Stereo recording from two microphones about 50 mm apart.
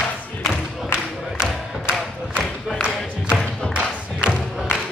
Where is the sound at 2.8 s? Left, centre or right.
Right.